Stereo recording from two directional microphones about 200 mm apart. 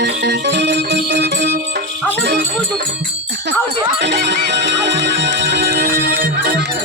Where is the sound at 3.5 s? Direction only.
60° right (ahead or behind).